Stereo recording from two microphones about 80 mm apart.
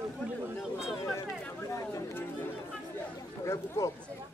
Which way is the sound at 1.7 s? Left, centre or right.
Left.